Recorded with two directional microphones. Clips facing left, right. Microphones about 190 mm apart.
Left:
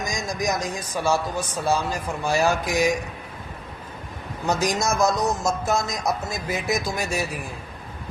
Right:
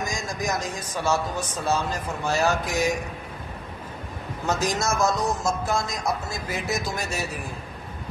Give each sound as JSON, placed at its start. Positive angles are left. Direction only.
{"t": 0.0, "sound": "speech", "side_deg": 15}
{"t": 4.5, "sound": "speech", "side_deg": 15}
{"t": 5.4, "sound": "a sound", "side_deg": 20}
{"t": 6.7, "sound": "speech", "side_deg": 15}